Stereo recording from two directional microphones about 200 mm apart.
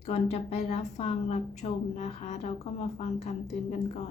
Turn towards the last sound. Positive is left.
turn(degrees=35)  # may be behind; listen again after turning